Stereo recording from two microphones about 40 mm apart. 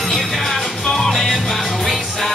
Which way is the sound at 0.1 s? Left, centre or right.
Centre.